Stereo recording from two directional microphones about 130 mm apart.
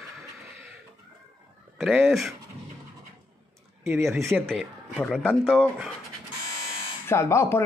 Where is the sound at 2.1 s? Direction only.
Centre (ahead or behind).